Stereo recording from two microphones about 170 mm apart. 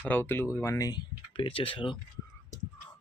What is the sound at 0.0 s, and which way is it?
Speech, 10° left (ahead or behind).